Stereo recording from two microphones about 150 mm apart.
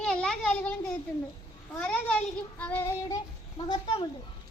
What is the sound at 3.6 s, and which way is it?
Speech, 40° left (ahead or behind).